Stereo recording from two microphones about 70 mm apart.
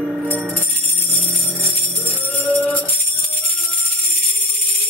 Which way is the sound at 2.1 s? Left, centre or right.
Left.